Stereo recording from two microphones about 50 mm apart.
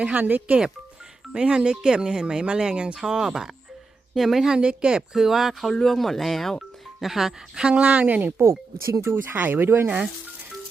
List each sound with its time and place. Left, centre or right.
0.2 s speech: right
1.3 s speech: centre
4.5 s speech: centre
5.1 s speech: centre
5.7 s speech: centre
7.8 s speech: right
8.4 s speech: right
9.0 s speech: right